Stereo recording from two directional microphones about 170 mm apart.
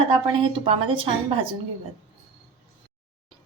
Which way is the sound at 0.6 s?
30° right (ahead or behind).